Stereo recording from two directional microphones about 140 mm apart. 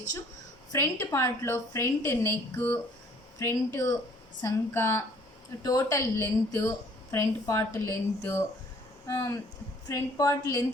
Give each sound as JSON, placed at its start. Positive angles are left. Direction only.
{"t": 0.7, "sound": "a woman's voice", "side_deg": 20}